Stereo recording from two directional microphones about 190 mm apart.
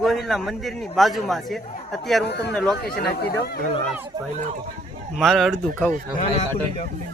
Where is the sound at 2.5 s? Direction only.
Centre (ahead or behind).